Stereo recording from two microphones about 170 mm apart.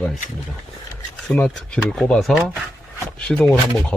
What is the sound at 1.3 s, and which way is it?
Speech, 5° left (ahead or behind).